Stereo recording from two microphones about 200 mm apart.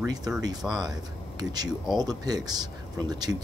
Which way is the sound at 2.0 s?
20° right (ahead or behind).